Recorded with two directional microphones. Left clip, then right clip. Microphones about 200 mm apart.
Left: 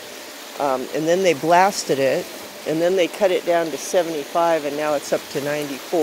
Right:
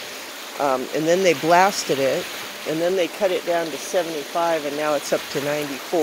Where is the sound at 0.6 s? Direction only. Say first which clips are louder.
Even; centre (ahead or behind).